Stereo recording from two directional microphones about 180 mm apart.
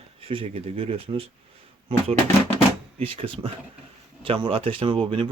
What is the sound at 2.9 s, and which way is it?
Speech, 30° right (ahead or behind).